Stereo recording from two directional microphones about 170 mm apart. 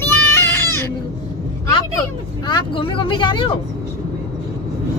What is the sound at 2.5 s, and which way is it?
Speech, 30° left (ahead or behind).